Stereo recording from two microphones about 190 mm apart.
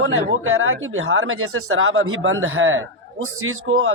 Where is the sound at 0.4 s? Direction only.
90° right.